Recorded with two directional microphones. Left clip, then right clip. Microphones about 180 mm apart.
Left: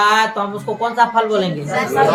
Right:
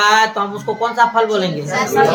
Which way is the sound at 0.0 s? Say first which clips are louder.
Right 1 dB; 20° right (ahead or behind).